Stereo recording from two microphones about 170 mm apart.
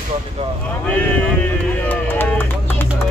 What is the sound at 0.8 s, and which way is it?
Run, 10° left (ahead or behind).